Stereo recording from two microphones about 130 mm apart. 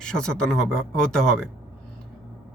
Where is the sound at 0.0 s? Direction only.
5° left (ahead or behind).